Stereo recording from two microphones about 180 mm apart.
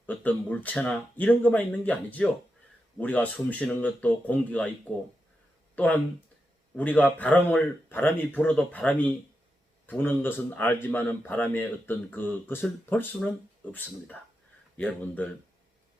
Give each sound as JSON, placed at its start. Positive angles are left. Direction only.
{"t": 0.0, "sound": "a man's voice", "side_deg": 10}
{"t": 5.7, "sound": "a man's voice", "side_deg": 10}
{"t": 14.8, "sound": "a man's voice", "side_deg": 10}